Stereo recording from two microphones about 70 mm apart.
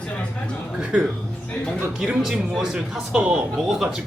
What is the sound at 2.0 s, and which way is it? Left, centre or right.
Speech, centre.